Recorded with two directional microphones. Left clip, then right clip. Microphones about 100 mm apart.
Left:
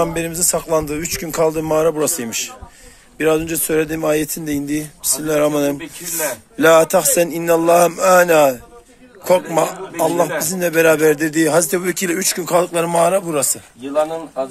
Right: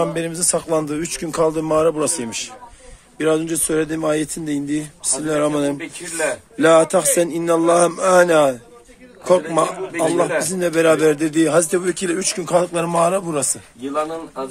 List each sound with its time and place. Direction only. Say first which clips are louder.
0.0 s a man's voice: left 2 dB; 25° right (ahead or behind)
5.8 s speech: right 1 dB; 25° left (ahead or behind)
6.6 s a man's voice: left 2 dB; 15° right (ahead or behind)